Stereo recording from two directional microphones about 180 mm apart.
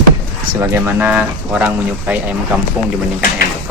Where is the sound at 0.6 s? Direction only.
10° right (ahead or behind).